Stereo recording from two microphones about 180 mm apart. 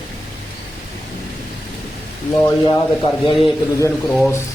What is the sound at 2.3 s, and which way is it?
Speech, 20° left (ahead or behind).